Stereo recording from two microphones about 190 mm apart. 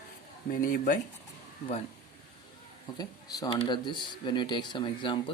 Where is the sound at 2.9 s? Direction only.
20° left (ahead or behind).